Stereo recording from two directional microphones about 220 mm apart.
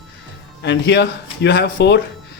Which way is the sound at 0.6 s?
50° left (ahead or behind).